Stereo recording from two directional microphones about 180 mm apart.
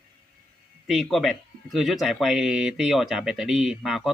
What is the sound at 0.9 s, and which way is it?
Speech, centre (ahead or behind).